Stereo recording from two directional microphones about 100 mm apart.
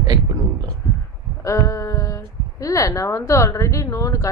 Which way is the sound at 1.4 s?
30° left (ahead or behind).